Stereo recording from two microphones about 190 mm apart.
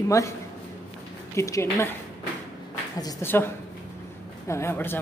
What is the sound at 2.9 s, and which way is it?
Speech, 15° left (ahead or behind).